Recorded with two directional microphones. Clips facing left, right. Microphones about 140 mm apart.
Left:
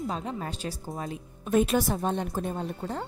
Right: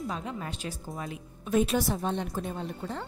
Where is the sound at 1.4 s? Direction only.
50° left (ahead or behind).